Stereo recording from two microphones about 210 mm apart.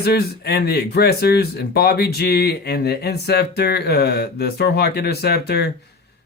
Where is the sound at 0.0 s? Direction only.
50° left (ahead or behind).